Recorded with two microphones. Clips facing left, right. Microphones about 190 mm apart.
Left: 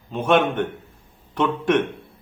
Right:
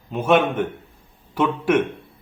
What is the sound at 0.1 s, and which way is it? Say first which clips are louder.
A man's voice: right 1 dB; 5° right (ahead or behind).